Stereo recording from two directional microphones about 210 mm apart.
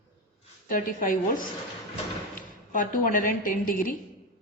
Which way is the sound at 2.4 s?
40° left (ahead or behind).